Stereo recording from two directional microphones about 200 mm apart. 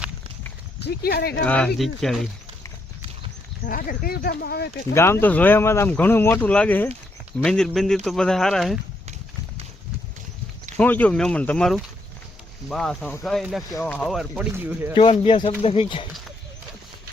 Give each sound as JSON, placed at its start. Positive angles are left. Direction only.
{"t": 0.8, "sound": "speech", "side_deg": 55}
{"t": 1.4, "sound": "speech", "side_deg": 5}
{"t": 3.7, "sound": "speech", "side_deg": 45}
{"t": 4.9, "sound": "speech", "side_deg": 10}
{"t": 10.8, "sound": "speech", "side_deg": 10}
{"t": 14.9, "sound": "speech", "side_deg": 30}